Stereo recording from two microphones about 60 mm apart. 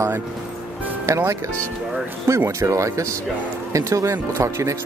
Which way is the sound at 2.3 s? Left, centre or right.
Right.